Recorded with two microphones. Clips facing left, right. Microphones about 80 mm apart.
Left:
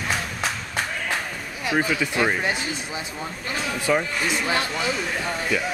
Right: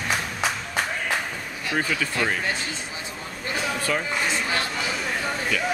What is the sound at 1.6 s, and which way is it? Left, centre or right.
Speech, centre.